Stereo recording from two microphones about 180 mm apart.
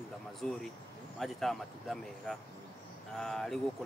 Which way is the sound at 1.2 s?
Centre (ahead or behind).